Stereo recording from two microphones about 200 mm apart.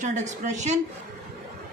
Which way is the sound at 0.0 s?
35° right (ahead or behind).